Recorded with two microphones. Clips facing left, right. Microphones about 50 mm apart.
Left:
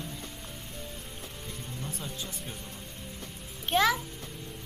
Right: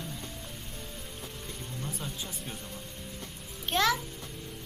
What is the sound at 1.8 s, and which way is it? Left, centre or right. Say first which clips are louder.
Speech: right 1 dB; centre.